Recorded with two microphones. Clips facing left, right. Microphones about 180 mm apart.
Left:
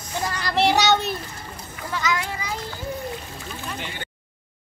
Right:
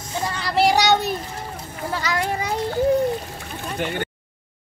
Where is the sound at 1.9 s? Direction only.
35° right (ahead or behind).